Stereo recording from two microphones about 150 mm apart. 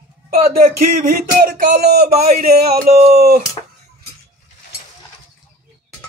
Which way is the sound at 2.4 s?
90° right.